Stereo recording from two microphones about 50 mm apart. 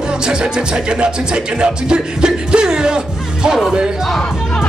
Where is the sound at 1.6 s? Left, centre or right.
Centre.